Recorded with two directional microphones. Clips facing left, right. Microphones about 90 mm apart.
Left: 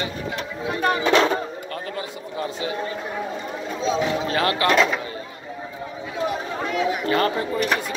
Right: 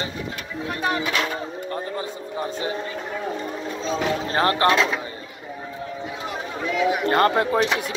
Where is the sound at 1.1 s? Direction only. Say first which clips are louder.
Left 7 dB; 25° left (ahead or behind).